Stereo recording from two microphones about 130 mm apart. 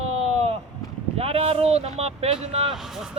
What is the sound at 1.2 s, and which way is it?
Speech, 50° right (ahead or behind).